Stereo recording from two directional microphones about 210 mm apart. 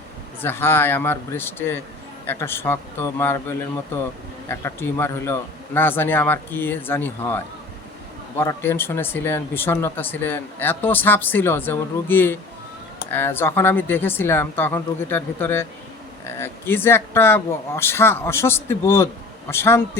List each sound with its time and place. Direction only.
0.4 s speech: 10° left (ahead or behind)